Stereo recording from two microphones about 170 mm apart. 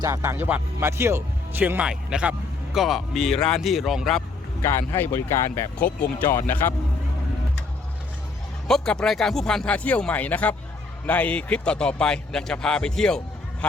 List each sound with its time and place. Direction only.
0.0 s a man's voice: 15° right (ahead or behind); by 4.2 s centre (ahead or behind)
4.6 s speech: 15° left (ahead or behind)
8.6 s a man's voice: 5° left (ahead or behind)